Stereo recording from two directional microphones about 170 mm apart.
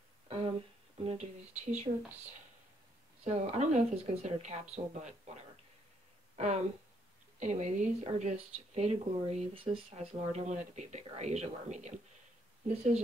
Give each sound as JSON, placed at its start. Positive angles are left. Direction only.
{"t": 0.3, "sound": "speech", "side_deg": -30}
{"t": 3.3, "sound": "speech", "side_deg": -40}